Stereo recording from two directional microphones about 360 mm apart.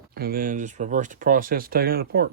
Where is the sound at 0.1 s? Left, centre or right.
Right.